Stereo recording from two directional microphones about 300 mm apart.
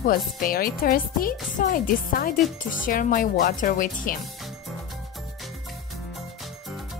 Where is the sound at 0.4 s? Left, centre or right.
Left.